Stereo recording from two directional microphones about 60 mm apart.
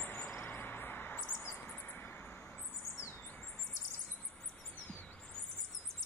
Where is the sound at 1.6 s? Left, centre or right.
Left.